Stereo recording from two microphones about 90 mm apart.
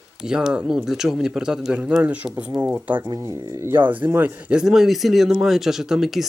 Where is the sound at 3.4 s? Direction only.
30° right (ahead or behind).